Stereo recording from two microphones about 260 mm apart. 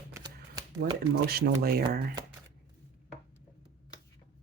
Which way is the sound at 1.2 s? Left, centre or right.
Right.